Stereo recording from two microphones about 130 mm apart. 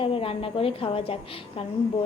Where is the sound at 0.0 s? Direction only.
45° left (ahead or behind).